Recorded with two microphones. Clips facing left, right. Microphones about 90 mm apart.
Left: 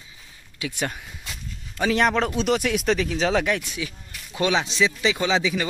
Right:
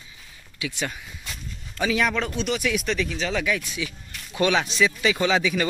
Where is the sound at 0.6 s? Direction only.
45° left (ahead or behind).